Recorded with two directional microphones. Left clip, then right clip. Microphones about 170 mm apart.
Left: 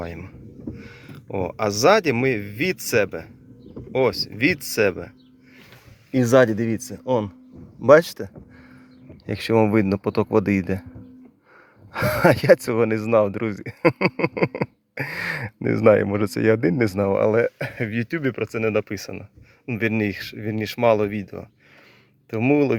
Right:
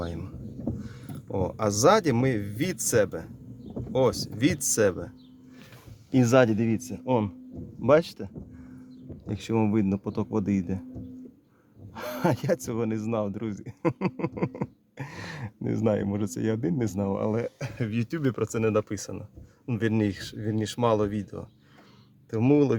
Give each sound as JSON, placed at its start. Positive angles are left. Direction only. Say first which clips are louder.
{"t": 0.0, "sound": "speech", "louder": "left 2 dB", "side_deg": 0}
{"t": 7.9, "sound": "speech", "louder": "left 8 dB", "side_deg": 15}
{"t": 11.9, "sound": "speech", "louder": "left 10 dB", "side_deg": 10}
{"t": 18.7, "sound": "speech", "louder": "left 3 dB", "side_deg": 10}
{"t": 20.1, "sound": "speech", "louder": "left 4 dB", "side_deg": 10}